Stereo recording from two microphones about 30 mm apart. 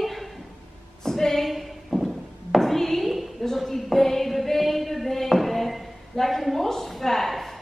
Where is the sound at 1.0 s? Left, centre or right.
Centre.